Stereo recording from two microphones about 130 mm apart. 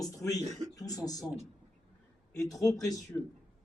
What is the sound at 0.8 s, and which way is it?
Speech, 30° left (ahead or behind).